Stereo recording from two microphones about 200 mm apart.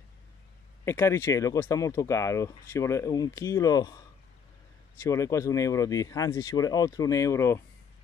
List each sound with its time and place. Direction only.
0.8 s speech: 15° left (ahead or behind)
5.0 s speech: 15° left (ahead or behind)